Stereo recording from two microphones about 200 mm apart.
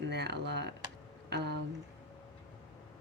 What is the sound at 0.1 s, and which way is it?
Speech, 55° right (ahead or behind).